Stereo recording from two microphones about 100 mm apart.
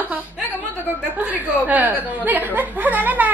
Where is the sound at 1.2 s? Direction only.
20° right (ahead or behind).